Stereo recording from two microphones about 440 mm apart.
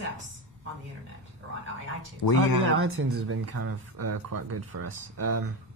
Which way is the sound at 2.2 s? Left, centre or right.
Left.